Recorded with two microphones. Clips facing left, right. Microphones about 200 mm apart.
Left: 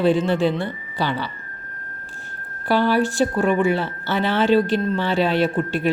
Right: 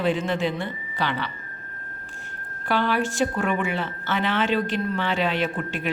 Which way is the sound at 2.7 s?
35° left (ahead or behind).